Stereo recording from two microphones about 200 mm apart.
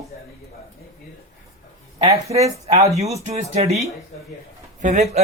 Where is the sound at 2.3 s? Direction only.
30° right (ahead or behind).